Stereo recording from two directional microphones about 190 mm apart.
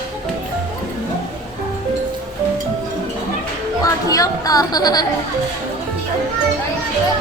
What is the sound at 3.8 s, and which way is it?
Chatter, 20° left (ahead or behind).